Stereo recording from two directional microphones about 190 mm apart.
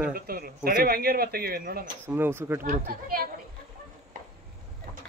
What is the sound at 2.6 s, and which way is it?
Speech, 45° right (ahead or behind).